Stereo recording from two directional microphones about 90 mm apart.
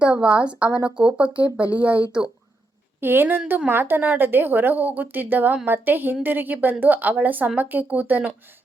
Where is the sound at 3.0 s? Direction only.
25° right (ahead or behind).